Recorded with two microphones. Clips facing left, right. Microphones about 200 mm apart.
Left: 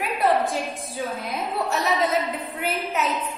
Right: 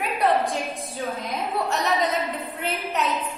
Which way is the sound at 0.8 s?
Centre (ahead or behind).